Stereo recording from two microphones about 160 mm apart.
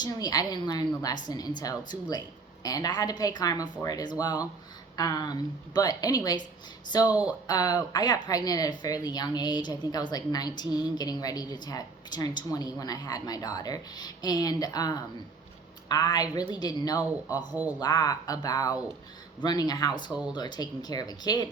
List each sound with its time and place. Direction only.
0.0 s speech: 25° left (ahead or behind)
7.1 s speech: 10° right (ahead or behind)
7.4 s speech: 25° left (ahead or behind)
17.5 s speech: 10° right (ahead or behind)
17.7 s speech: 25° left (ahead or behind)